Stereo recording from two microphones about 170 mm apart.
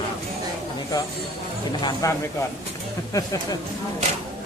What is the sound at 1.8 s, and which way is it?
Speech, 20° left (ahead or behind).